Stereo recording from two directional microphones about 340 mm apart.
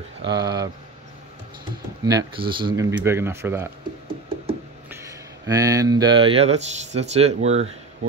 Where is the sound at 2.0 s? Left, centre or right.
Centre.